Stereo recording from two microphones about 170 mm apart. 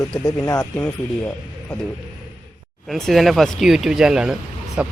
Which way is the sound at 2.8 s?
Centre (ahead or behind).